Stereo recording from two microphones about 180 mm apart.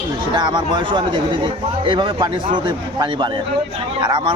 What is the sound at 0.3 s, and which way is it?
Speech, 25° right (ahead or behind).